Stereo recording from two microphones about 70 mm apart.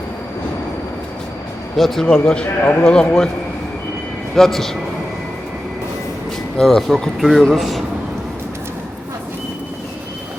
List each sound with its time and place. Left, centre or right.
1.7 s speech: centre
2.6 s a man's voice: left
2.8 s speech: centre
4.4 s speech: centre
6.6 s speech: centre